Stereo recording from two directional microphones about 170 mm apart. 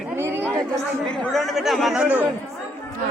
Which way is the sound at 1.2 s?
Centre (ahead or behind).